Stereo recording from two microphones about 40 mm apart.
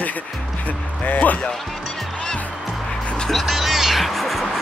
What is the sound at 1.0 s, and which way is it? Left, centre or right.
Speech, left.